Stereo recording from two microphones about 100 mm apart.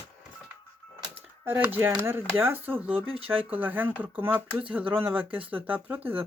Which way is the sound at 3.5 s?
20° right (ahead or behind).